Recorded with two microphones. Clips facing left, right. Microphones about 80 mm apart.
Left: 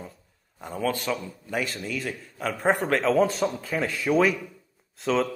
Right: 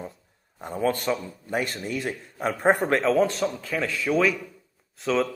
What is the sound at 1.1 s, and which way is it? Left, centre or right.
Speech, centre.